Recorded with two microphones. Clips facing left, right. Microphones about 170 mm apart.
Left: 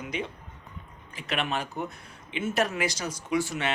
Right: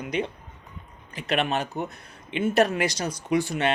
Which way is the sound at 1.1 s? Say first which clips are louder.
Right 5 dB; 65° right (ahead or behind).